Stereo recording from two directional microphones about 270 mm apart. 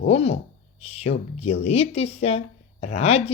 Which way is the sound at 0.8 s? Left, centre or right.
Left.